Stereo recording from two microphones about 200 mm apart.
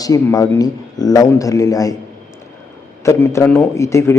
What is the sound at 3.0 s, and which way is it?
A man's voice, 15° left (ahead or behind).